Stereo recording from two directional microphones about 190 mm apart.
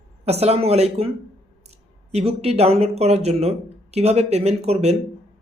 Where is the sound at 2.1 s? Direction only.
35° right (ahead or behind).